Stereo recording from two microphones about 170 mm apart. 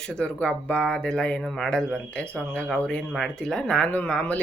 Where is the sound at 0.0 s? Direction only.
5° left (ahead or behind).